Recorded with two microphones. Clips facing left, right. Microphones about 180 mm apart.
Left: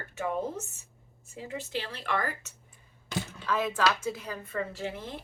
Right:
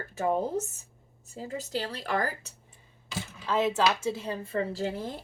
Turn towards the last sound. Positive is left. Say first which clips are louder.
# right 4 dB
turn(degrees=-35)  # may be behind; listen again after turning